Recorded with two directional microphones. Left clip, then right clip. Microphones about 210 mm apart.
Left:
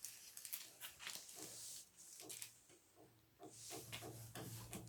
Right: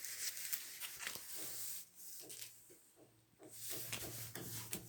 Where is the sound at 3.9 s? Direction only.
50° right (ahead or behind).